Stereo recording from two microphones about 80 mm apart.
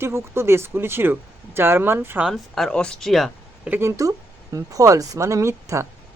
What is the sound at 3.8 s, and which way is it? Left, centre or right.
Speech, right.